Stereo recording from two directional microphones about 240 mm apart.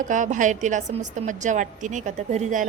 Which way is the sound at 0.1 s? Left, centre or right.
Right.